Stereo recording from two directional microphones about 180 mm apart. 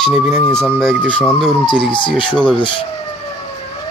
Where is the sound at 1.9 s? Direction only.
25° left (ahead or behind).